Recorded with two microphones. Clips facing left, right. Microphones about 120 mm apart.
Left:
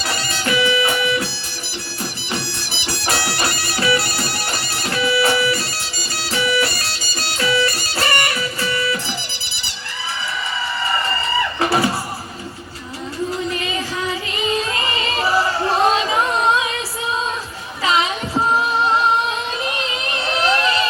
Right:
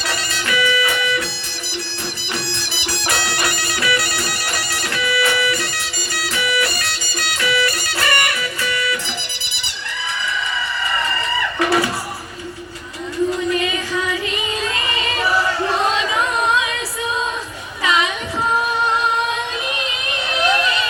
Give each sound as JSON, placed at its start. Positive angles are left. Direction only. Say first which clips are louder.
{"t": 0.1, "sound": "music", "louder": "left 2 dB", "side_deg": 30}
{"t": 2.8, "sound": "music", "louder": "left 1 dB", "side_deg": 25}
{"t": 11.6, "sound": "music", "louder": "right 1 dB", "side_deg": 30}
{"t": 14.8, "sound": "singing", "louder": "left 1 dB", "side_deg": 30}
{"t": 17.8, "sound": "music", "louder": "even", "side_deg": 30}
{"t": 20.5, "sound": "music", "louder": "left 1 dB", "side_deg": 35}